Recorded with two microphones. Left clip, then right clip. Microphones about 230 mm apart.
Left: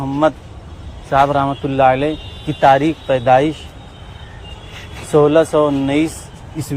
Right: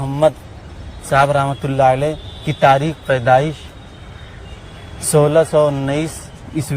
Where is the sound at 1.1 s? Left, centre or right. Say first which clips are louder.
Even; right.